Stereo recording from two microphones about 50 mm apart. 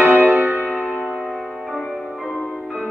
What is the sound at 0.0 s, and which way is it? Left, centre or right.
Music, right.